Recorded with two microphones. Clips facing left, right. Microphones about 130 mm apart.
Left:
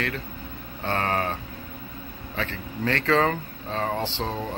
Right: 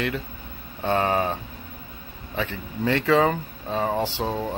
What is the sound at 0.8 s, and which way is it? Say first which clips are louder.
Speech: right 4 dB; 15° right (ahead or behind).